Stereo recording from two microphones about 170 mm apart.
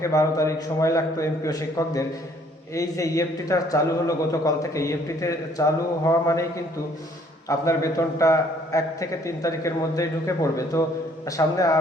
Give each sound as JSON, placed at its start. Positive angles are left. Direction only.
{"t": 0.0, "sound": "a man's voice", "side_deg": 20}
{"t": 7.4, "sound": "a man's voice", "side_deg": 20}